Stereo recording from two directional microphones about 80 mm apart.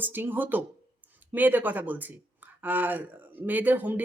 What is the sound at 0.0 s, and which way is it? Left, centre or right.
Speech, right.